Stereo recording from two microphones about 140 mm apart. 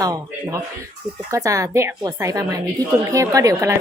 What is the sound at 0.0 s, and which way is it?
A woman's voice, 25° right (ahead or behind).